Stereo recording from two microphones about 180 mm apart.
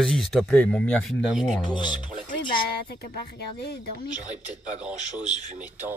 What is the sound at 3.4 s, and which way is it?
Speech, 65° left (ahead or behind).